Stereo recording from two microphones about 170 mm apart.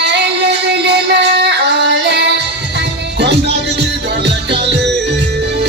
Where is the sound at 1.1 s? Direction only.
70° right (ahead or behind).